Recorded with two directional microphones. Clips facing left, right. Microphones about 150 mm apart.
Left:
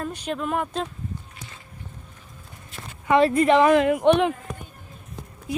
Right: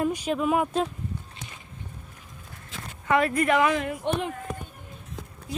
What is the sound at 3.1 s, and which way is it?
Speech, 25° left (ahead or behind).